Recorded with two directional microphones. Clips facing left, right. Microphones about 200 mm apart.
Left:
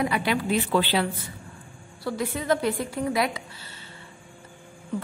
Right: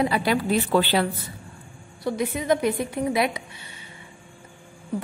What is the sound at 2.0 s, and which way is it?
A woman's voice, 20° right (ahead or behind).